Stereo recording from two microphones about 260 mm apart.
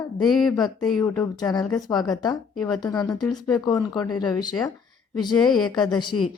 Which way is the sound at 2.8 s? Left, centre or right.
Centre.